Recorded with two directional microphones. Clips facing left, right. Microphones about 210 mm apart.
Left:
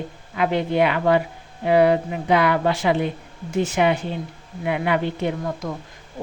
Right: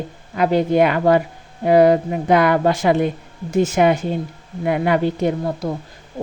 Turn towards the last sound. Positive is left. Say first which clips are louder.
# right 5 dB
turn(degrees=-35)  # may be behind; listen again after turning